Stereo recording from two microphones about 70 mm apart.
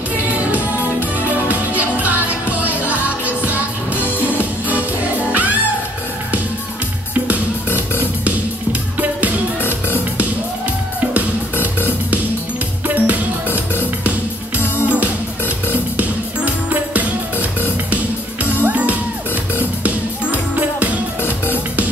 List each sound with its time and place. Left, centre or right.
0.5 s music: right
11.6 s music: right
14.9 s music: right